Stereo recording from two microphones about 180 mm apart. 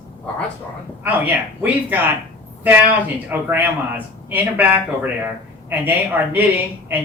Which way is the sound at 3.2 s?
10° right (ahead or behind).